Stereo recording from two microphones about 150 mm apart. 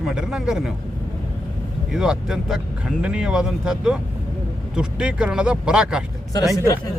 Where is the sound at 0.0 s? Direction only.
5° right (ahead or behind).